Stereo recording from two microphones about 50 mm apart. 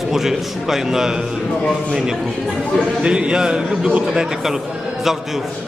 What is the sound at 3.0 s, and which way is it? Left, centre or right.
A man's voice, centre.